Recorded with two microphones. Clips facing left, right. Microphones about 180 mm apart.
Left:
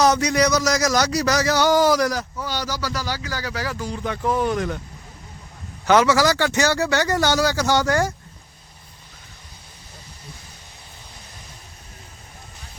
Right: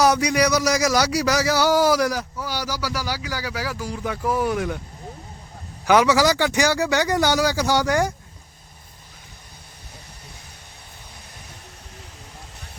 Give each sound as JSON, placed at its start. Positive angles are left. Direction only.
{"t": 0.0, "sound": "a man's voice", "side_deg": -10}
{"t": 5.8, "sound": "a man's voice", "side_deg": -10}